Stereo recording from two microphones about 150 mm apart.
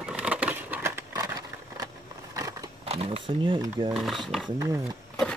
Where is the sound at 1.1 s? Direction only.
25° right (ahead or behind).